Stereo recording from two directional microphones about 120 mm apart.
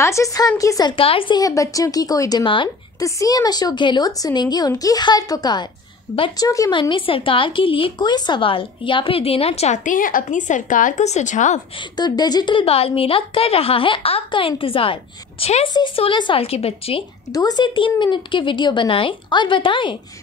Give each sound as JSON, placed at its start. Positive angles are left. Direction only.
{"t": 0.0, "sound": "a woman's voice", "side_deg": 25}
{"t": 0.9, "sound": "speech", "side_deg": 50}
{"t": 1.4, "sound": "a woman's voice", "side_deg": 30}
{"t": 3.0, "sound": "a woman's voice", "side_deg": 30}
{"t": 6.7, "sound": "speech", "side_deg": 45}
{"t": 12.0, "sound": "speech", "side_deg": 35}
{"t": 16.0, "sound": "speech", "side_deg": 45}
{"t": 17.3, "sound": "a woman's voice", "side_deg": 35}